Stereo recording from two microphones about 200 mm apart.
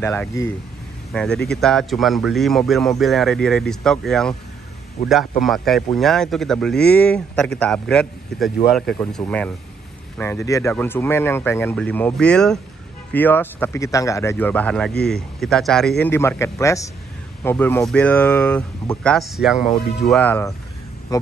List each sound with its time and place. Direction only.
0.0 s speech: 10° left (ahead or behind)
5.4 s speech: centre (ahead or behind); by 21.3 s 15° left (ahead or behind)